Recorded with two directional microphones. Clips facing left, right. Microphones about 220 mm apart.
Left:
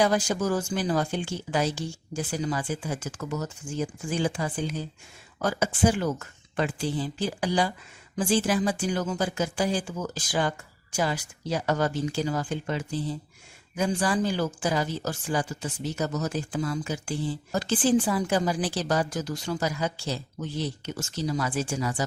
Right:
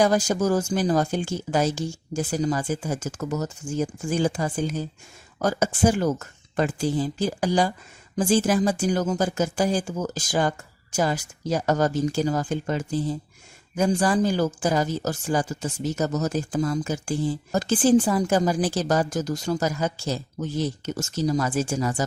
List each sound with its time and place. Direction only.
0.0 s speech: 45° right (ahead or behind)